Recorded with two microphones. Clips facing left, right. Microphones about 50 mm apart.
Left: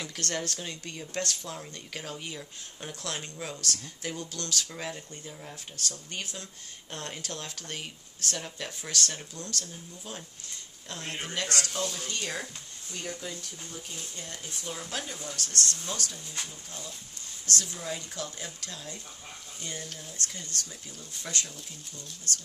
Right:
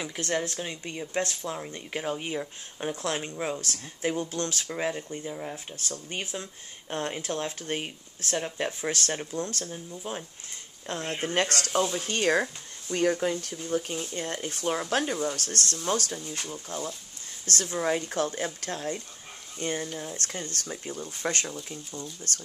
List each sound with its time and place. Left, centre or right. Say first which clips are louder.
0.0 s speech: right 4 dB; centre
11.3 s speech: right 6 dB; right
11.8 s speech: right 6 dB; right
12.1 s speech: right 10 dB; right